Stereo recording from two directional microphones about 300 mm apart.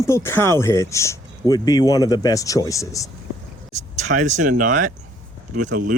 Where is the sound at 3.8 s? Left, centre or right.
Right.